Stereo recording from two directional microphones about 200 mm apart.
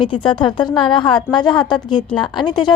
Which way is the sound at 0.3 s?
25° left (ahead or behind).